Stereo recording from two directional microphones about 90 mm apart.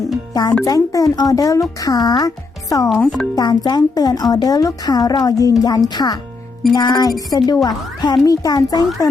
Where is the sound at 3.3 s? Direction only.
50° left (ahead or behind).